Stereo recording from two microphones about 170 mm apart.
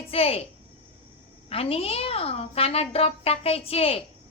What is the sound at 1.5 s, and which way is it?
A woman's voice, 35° left (ahead or behind).